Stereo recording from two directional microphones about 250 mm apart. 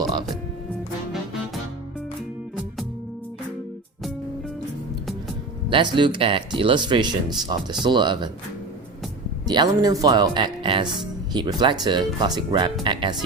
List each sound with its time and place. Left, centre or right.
5.6 s speech: centre
9.5 s speech: centre